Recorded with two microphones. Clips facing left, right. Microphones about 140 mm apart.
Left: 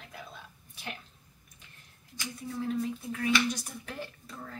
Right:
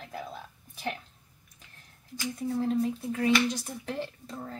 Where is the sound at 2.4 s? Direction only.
40° right (ahead or behind).